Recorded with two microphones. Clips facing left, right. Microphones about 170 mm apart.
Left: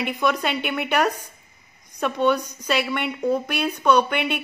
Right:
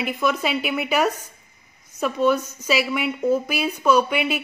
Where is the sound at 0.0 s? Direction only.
Centre (ahead or behind).